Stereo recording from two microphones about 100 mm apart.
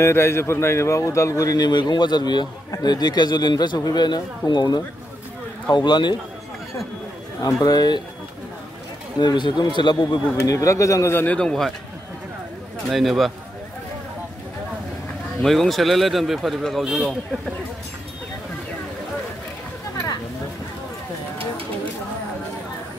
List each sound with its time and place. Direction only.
0.0 s a man's voice: 25° left (ahead or behind); by 6.1 s 50° left (ahead or behind)
7.4 s speech: 40° left (ahead or behind)
9.2 s a man's voice: 50° left (ahead or behind)
10.4 s speech: 30° left (ahead or behind)
11.2 s speech: 10° left (ahead or behind)
12.9 s a man's voice: centre (ahead or behind)
15.4 s a man's voice: centre (ahead or behind)